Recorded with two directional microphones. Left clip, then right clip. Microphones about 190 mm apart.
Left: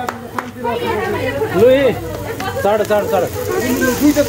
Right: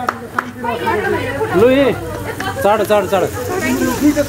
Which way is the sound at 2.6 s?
35° right (ahead or behind).